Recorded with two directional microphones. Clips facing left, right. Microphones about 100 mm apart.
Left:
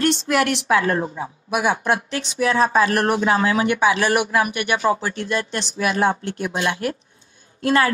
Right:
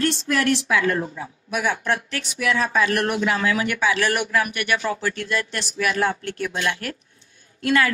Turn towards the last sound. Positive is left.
turn(degrees=30)  # may be behind; listen again after turning